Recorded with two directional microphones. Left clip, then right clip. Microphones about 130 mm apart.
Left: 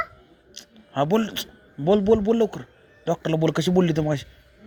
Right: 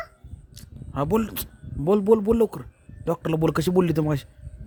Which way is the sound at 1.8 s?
35° right (ahead or behind).